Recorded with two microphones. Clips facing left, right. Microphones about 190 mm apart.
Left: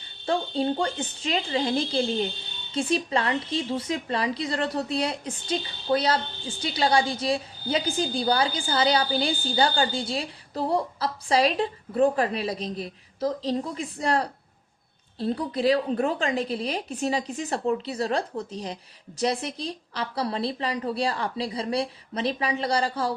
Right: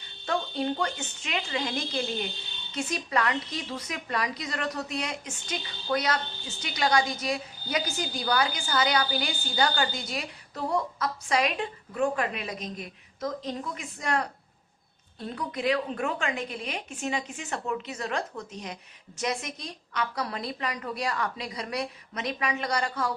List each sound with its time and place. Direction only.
0.3 s a woman's voice: 30° left (ahead or behind)